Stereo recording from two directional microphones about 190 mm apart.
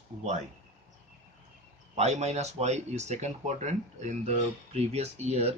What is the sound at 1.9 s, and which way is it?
Speech, 35° right (ahead or behind).